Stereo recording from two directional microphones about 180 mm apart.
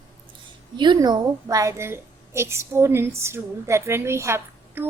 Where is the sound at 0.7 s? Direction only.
25° right (ahead or behind).